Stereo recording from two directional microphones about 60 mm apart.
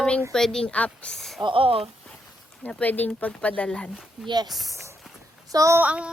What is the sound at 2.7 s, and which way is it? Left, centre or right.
Speech, left.